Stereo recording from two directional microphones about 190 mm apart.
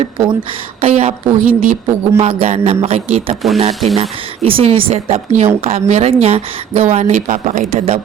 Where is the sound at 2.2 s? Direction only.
35° right (ahead or behind).